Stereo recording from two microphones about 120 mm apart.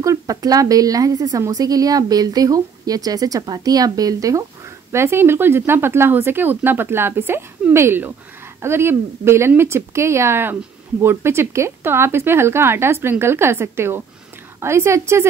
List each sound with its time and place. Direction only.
0.0 s a woman's voice: 30° right (ahead or behind)